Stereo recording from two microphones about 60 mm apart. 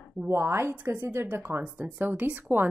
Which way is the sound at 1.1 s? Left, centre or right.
Right.